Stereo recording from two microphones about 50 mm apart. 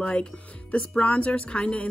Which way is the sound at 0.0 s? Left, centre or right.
Left.